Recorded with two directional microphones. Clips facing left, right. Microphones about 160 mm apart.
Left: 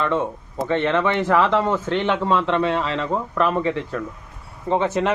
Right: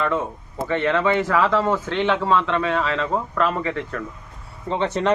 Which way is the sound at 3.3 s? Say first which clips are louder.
Left 5 dB; 25° left (ahead or behind).